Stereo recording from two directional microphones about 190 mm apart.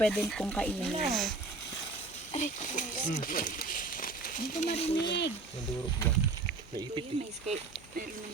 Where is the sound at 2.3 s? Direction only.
40° left (ahead or behind).